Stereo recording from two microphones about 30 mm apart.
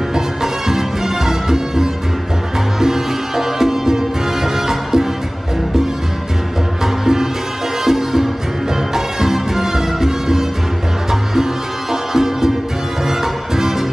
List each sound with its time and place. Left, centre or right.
0.1 s music: centre
6.8 s music: centre
11.9 s music: centre